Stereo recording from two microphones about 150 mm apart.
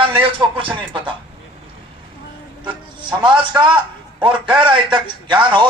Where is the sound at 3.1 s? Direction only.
30° right (ahead or behind).